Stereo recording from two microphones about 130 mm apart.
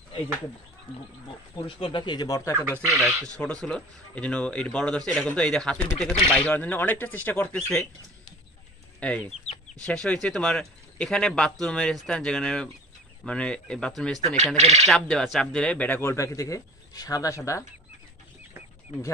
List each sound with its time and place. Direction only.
1.6 s speech: 40° left (ahead or behind); by 2.5 s 25° left (ahead or behind)
3.0 s speech: centre (ahead or behind)
3.3 s speech: 10° left (ahead or behind)
6.4 s speech: 15° left (ahead or behind)
9.0 s speech: 10° left (ahead or behind)
14.2 s speech: 55° right (ahead or behind)
14.9 s speech: 5° left (ahead or behind); by 17.4 s 25° left (ahead or behind)